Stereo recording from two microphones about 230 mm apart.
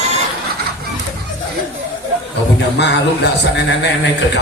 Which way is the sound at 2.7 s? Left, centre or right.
Left.